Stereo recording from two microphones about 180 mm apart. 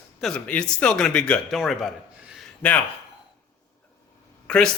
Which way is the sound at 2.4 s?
5° left (ahead or behind).